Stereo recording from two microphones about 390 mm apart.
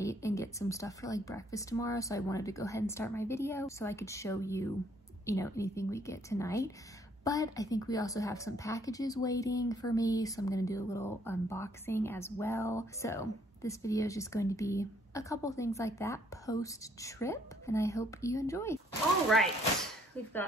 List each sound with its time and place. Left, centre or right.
0.0 s a woman's voice: centre